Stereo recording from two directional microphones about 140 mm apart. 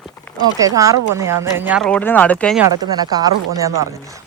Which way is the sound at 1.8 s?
10° left (ahead or behind).